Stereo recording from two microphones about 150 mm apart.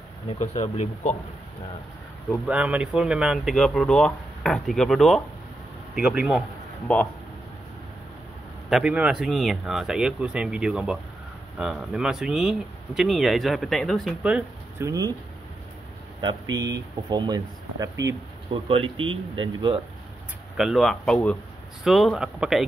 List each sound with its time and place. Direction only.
0.3 s speech: 50° left (ahead or behind)
2.4 s speech: 10° right (ahead or behind)
6.9 s speech: 10° left (ahead or behind)
8.6 s speech: 5° right (ahead or behind)
14.8 s speech: 25° right (ahead or behind)
16.2 s speech: 30° right (ahead or behind)
18.5 s speech: 35° right (ahead or behind)
20.5 s speech: centre (ahead or behind)